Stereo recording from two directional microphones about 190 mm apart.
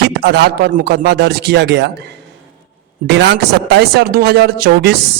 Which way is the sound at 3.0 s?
65° right (ahead or behind).